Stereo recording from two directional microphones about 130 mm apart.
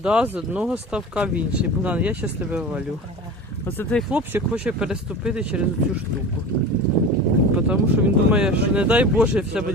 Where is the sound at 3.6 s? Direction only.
15° left (ahead or behind).